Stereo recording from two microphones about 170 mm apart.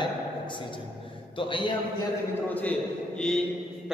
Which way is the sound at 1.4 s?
30° left (ahead or behind).